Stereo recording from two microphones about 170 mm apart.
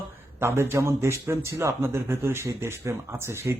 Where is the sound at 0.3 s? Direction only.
15° right (ahead or behind).